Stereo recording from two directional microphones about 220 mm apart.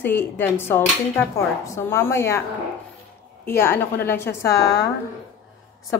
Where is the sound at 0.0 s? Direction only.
10° left (ahead or behind).